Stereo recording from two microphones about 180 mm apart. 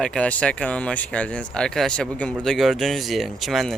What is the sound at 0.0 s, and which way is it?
Speech, 5° left (ahead or behind).